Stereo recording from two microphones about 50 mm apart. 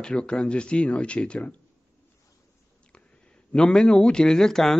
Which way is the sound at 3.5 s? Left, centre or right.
Centre.